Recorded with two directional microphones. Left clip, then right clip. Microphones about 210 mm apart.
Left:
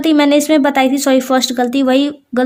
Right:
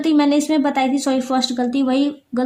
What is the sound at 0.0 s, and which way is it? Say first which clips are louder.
A woman's voice: left 5 dB; 50° left (ahead or behind).